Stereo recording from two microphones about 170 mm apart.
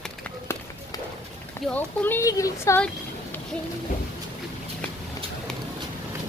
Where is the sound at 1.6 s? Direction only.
10° left (ahead or behind).